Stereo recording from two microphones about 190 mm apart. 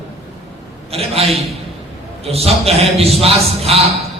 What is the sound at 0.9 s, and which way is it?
A man's voice, 30° right (ahead or behind).